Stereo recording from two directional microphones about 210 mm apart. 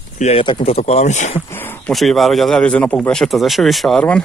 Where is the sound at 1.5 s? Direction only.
10° left (ahead or behind).